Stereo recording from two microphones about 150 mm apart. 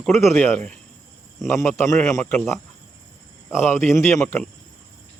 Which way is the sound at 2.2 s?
5° left (ahead or behind).